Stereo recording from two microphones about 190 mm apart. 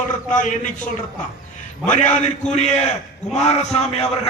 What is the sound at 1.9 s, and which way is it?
Speech, 40° left (ahead or behind).